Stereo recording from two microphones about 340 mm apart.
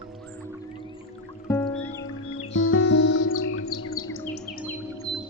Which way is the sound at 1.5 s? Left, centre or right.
Centre.